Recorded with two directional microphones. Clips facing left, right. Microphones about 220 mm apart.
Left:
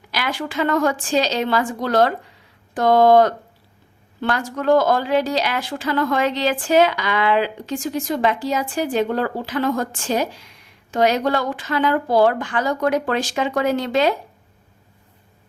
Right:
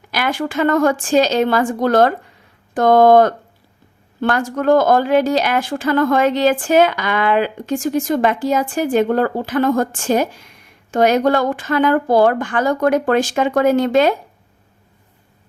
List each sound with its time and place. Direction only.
0.1 s speech: 50° right (ahead or behind)